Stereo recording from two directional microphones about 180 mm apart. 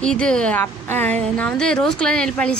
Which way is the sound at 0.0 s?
5° left (ahead or behind).